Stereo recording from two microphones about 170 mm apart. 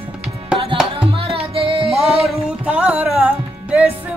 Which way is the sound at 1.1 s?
30° right (ahead or behind).